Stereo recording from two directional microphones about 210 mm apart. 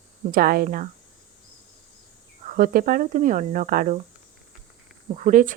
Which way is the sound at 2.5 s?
45° right (ahead or behind).